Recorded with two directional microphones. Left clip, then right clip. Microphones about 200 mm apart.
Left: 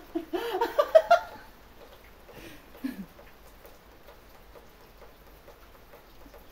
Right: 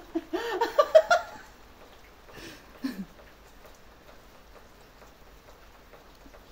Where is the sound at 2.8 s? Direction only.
30° right (ahead or behind).